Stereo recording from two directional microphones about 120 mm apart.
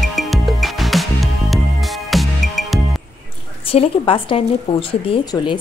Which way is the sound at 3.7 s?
50° left (ahead or behind).